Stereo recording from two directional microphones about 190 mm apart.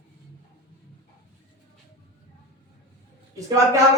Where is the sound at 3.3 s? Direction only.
15° right (ahead or behind).